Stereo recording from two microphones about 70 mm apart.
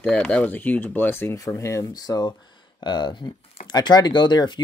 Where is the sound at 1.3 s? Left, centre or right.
Left.